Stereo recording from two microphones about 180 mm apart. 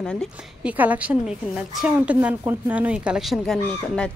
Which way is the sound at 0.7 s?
10° right (ahead or behind).